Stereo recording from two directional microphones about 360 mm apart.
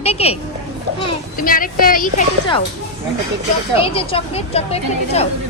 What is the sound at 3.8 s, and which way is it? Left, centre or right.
Speech, centre.